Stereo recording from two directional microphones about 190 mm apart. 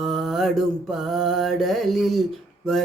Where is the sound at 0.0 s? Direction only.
Centre (ahead or behind).